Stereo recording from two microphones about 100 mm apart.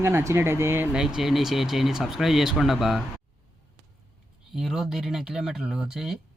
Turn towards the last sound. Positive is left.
turn(degrees=-5)  # may be behind; listen again after turning